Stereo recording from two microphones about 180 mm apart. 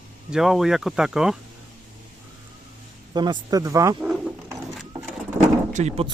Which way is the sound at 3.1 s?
25° right (ahead or behind).